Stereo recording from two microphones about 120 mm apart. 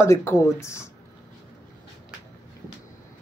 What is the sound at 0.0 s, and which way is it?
Speech, 20° left (ahead or behind).